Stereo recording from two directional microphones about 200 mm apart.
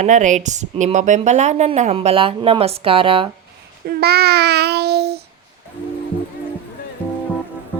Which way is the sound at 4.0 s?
55° right (ahead or behind).